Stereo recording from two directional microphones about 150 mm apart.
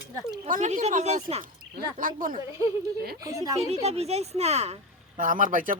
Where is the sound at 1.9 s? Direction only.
65° right (ahead or behind).